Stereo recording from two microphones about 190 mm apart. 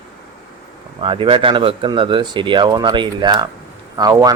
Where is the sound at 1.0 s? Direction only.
25° right (ahead or behind).